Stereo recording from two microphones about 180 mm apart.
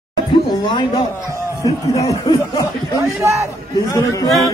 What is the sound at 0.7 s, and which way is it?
Speech, 25° left (ahead or behind).